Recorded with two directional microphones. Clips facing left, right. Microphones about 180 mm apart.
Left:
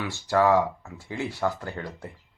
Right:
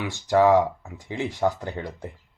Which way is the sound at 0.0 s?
15° right (ahead or behind).